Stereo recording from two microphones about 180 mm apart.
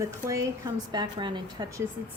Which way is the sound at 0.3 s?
20° right (ahead or behind).